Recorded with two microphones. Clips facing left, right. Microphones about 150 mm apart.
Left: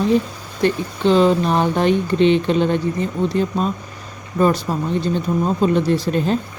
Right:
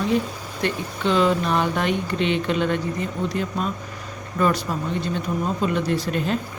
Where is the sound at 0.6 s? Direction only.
30° left (ahead or behind).